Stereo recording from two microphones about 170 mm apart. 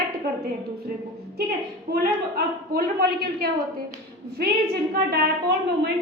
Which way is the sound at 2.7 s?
65° right (ahead or behind).